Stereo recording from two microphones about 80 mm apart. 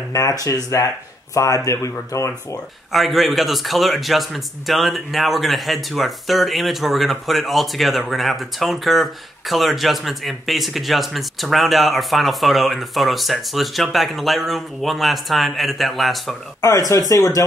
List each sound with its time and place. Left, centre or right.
0.1 s speech: left
2.9 s a man's voice: centre
17.1 s speech: left